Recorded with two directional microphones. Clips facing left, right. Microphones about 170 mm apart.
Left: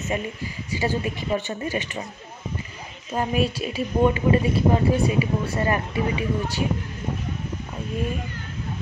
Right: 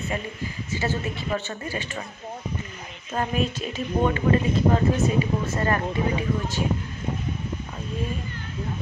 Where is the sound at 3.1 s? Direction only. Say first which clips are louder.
Left 2 dB; 10° left (ahead or behind).